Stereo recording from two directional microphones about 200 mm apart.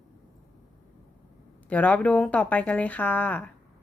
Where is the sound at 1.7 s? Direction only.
5° left (ahead or behind).